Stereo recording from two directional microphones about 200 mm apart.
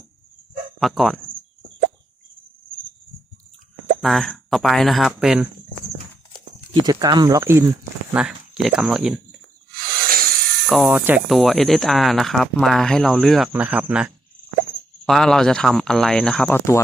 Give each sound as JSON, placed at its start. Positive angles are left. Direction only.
{"t": 0.8, "sound": "speech", "side_deg": 0}
{"t": 4.0, "sound": "speech", "side_deg": 0}
{"t": 6.7, "sound": "speech", "side_deg": -20}
{"t": 8.1, "sound": "speech", "side_deg": -5}
{"t": 10.1, "sound": "a sound", "side_deg": -45}
{"t": 10.7, "sound": "speech", "side_deg": -5}